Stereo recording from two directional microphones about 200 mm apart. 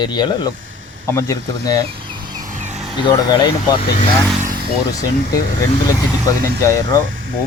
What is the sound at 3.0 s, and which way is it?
Speech, 20° left (ahead or behind).